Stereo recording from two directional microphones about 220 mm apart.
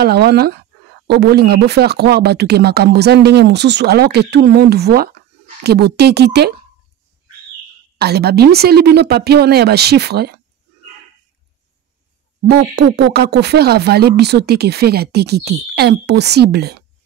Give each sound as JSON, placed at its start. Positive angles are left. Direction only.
{"t": 0.0, "sound": "speech", "side_deg": -50}
{"t": 8.0, "sound": "speech", "side_deg": -45}
{"t": 12.4, "sound": "speech", "side_deg": -50}